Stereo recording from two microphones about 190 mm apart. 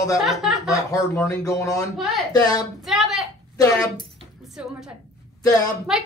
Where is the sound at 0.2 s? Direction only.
Centre (ahead or behind).